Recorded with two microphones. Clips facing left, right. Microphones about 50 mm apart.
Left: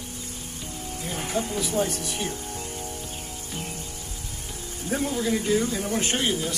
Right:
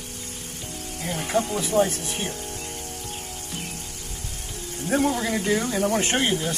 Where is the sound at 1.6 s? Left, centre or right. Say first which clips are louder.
Right 4 dB; right.